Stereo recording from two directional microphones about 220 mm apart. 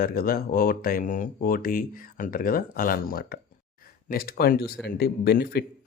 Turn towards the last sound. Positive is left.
turn(degrees=45)  # may be behind; listen again after turning